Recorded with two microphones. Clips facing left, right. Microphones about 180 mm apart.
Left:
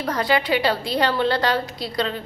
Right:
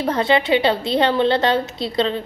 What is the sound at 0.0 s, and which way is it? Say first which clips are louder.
A woman's voice: right 4 dB; 25° right (ahead or behind).